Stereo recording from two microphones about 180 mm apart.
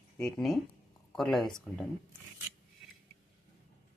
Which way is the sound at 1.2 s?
5° left (ahead or behind).